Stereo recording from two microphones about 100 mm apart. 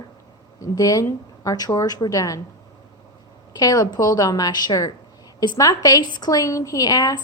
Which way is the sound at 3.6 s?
40° left (ahead or behind).